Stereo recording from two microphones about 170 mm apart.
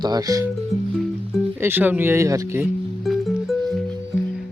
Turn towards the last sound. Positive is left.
turn(degrees=0)  # may be behind; listen again after turning